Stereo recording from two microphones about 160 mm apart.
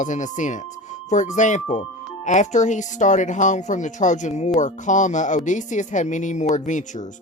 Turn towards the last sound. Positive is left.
turn(degrees=50)  # may be behind; listen again after turning